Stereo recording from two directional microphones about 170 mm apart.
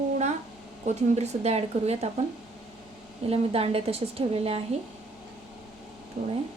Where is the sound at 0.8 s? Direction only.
40° right (ahead or behind).